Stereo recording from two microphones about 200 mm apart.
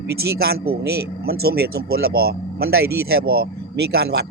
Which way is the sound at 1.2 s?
50° right (ahead or behind).